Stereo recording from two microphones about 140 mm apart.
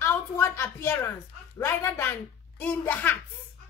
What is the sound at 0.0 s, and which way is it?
A woman's voice, 20° left (ahead or behind).